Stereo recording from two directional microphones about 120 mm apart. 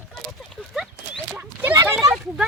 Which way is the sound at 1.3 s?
15° right (ahead or behind).